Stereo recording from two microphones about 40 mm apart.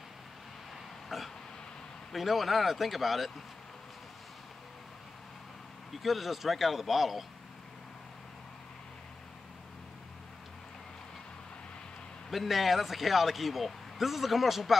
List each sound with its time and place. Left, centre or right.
1.0 s a sound: centre
2.1 s speech: centre
5.9 s speech: centre
12.3 s speech: centre